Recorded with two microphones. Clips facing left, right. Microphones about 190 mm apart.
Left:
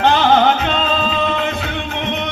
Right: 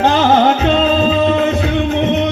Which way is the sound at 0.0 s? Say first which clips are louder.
Right 2 dB; 40° right (ahead or behind).